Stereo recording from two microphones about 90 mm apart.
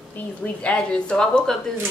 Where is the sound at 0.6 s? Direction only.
10° left (ahead or behind).